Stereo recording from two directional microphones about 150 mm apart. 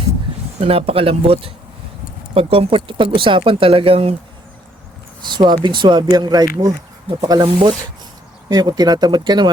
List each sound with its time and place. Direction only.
0.6 s speech: 40° right (ahead or behind)
5.2 s speech: 30° right (ahead or behind)